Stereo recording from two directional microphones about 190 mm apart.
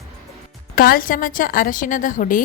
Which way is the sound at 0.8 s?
50° left (ahead or behind).